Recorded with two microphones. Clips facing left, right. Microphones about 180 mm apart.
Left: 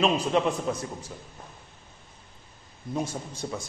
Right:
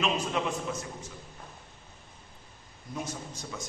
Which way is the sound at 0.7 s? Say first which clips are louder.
Left 5 dB; 40° left (ahead or behind).